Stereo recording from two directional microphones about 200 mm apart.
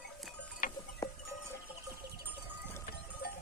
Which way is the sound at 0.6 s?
45° left (ahead or behind).